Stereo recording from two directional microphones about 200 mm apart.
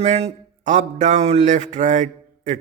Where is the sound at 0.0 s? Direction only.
30° right (ahead or behind).